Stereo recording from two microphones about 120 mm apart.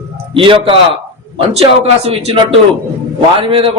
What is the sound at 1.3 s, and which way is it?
A man's voice, 60° right (ahead or behind).